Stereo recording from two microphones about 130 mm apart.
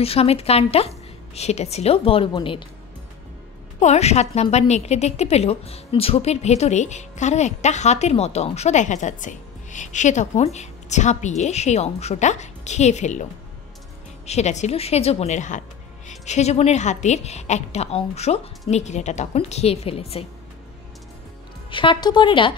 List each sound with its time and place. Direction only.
0.0 s a woman's voice: 50° left (ahead or behind)
3.8 s a woman's voice: 60° left (ahead or behind)
21.6 s a woman's voice: 40° left (ahead or behind)